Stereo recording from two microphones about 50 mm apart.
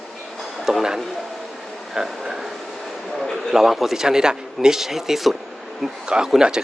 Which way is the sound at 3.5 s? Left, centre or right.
Centre.